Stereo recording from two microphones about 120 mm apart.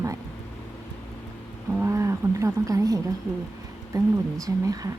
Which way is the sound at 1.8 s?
25° right (ahead or behind).